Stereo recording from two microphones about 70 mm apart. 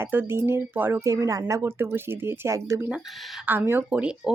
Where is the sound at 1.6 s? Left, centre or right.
Right.